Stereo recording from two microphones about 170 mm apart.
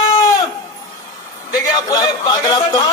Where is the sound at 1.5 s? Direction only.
20° left (ahead or behind).